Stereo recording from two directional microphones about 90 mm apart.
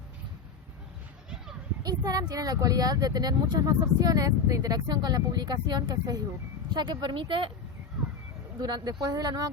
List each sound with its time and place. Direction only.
1.8 s speech: 45° right (ahead or behind)
6.7 s speech: 55° right (ahead or behind)
8.6 s speech: 50° right (ahead or behind)